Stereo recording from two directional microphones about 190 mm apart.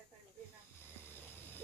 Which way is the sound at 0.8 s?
10° left (ahead or behind).